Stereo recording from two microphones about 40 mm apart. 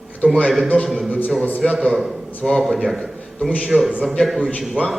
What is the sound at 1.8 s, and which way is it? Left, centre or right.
Mantra, centre.